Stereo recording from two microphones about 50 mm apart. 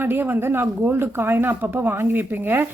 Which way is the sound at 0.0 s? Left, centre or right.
Right.